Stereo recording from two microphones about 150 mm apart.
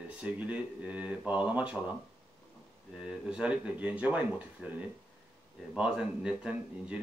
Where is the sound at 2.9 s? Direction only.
5° right (ahead or behind).